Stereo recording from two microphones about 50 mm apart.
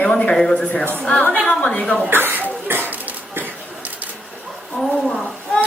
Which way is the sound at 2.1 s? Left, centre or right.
Right.